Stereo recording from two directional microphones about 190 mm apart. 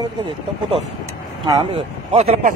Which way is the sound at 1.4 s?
30° right (ahead or behind).